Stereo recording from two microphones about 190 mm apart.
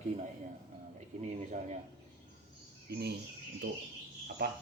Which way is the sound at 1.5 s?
40° right (ahead or behind).